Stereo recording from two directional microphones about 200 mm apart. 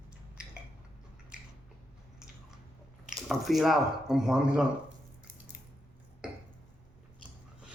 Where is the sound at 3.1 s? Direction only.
Centre (ahead or behind).